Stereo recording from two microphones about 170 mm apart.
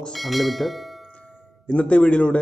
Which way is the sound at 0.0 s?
Centre (ahead or behind).